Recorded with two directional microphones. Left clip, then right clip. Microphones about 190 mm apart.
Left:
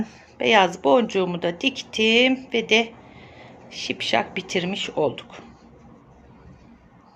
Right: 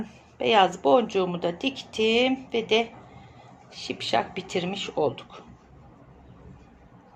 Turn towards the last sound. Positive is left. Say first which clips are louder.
# left 3 dB
turn(degrees=20)  # may be behind; listen again after turning